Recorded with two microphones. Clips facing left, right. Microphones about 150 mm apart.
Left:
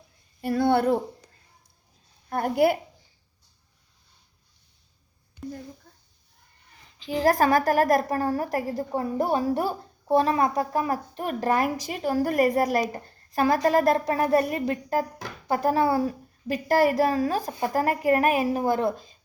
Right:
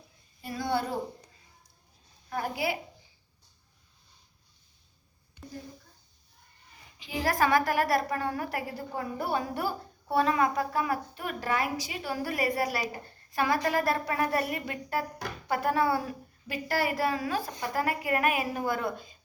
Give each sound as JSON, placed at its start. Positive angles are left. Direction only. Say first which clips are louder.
{"t": 0.4, "sound": "a woman's voice", "louder": "left 9 dB", "side_deg": 60}
{"t": 2.3, "sound": "a woman's voice", "louder": "left 9 dB", "side_deg": 55}
{"t": 7.2, "sound": "a woman's voice", "louder": "left 5 dB", "side_deg": 40}